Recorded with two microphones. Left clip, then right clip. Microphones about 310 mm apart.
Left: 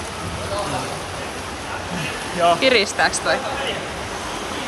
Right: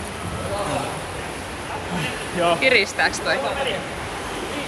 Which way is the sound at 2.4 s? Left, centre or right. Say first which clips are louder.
Left 2 dB; centre.